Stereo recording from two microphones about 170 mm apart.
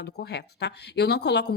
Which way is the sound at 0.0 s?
75° left (ahead or behind).